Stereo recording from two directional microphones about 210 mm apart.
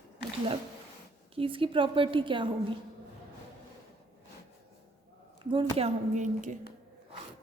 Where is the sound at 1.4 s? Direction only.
25° right (ahead or behind).